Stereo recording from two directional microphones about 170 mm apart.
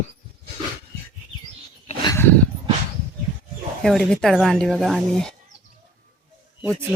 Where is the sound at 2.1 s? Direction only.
15° left (ahead or behind).